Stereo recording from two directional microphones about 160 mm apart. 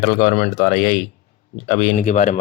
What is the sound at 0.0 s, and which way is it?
Speech, 50° left (ahead or behind).